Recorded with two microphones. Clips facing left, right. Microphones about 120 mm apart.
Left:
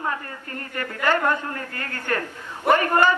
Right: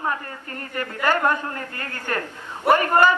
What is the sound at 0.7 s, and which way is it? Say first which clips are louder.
A man's voice: even; 15° right (ahead or behind).